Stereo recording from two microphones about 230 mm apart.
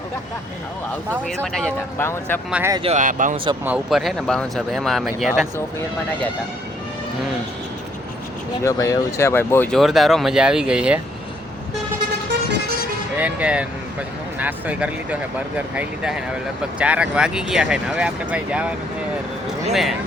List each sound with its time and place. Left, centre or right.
1.5 s speech: centre
2.5 s speech: centre
2.8 s speech: right
3.6 s speech: centre
8.6 s speech: centre
13.1 s speech: centre